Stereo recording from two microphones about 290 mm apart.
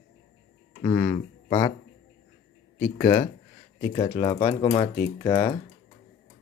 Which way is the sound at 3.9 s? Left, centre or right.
Centre.